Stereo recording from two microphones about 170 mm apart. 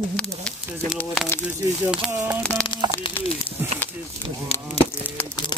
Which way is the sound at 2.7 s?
25° left (ahead or behind).